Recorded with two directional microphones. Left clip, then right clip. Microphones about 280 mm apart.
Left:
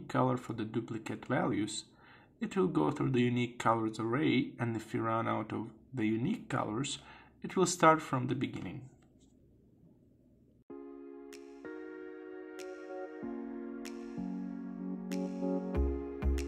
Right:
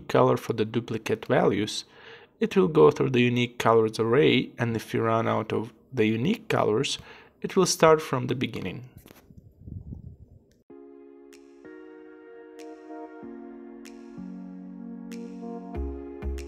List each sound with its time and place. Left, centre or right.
0.0 s speech: right
11.2 s music: centre
15.7 s music: centre